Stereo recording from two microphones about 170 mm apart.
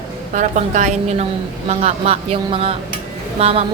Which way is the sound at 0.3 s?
45° right (ahead or behind).